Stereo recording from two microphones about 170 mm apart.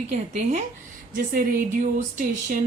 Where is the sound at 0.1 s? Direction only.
45° right (ahead or behind).